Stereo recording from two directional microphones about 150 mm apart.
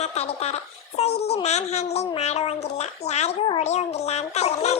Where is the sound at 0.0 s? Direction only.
45° left (ahead or behind).